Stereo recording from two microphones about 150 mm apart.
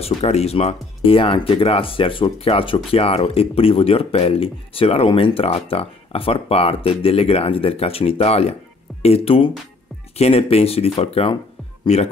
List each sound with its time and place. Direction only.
0.0 s speech: 45° left (ahead or behind)